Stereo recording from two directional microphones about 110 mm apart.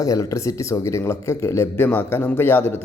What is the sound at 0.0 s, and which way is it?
A man's voice, 30° left (ahead or behind).